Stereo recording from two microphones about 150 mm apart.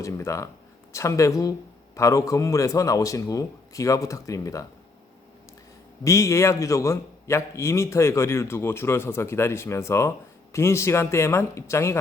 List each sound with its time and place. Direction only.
0.0 s a man's voice: 20° left (ahead or behind)
6.1 s a man's voice: 20° left (ahead or behind)